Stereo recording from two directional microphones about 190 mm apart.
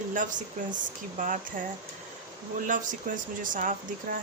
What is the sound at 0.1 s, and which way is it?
Speech, 45° right (ahead or behind).